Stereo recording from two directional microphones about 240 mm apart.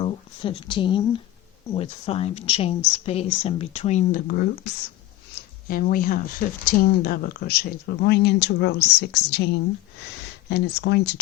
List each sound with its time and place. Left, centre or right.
0.0 s speech: left
5.3 s a sound: left
6.7 s speech: left
10.5 s speech: left